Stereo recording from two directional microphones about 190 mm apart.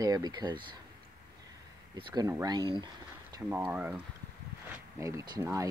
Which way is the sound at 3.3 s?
10° right (ahead or behind).